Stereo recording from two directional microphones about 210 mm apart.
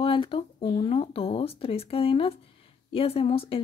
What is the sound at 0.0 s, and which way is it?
Speech, 25° left (ahead or behind).